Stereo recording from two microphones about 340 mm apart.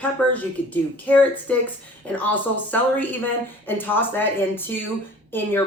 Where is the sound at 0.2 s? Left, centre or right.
Centre.